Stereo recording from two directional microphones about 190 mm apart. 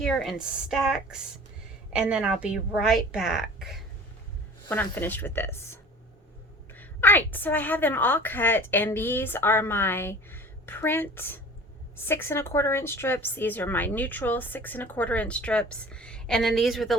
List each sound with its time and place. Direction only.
0.0 s a woman's voice: centre (ahead or behind)
4.7 s a woman's voice: 10° left (ahead or behind)